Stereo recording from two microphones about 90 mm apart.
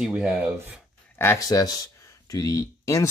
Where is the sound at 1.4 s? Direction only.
45° left (ahead or behind).